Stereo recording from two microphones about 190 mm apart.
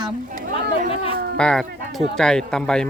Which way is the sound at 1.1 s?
55° right (ahead or behind).